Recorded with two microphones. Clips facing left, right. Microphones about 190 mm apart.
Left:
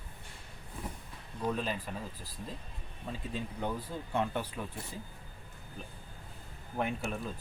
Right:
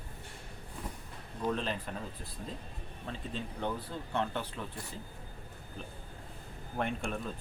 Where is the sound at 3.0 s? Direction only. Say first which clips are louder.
Left 1 dB; 10° left (ahead or behind).